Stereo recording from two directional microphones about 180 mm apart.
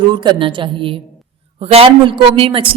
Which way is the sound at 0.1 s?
25° right (ahead or behind).